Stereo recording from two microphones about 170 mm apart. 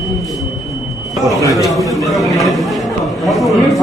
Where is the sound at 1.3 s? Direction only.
20° left (ahead or behind).